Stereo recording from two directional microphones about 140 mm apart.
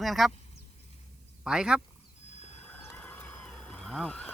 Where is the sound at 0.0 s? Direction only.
Centre (ahead or behind).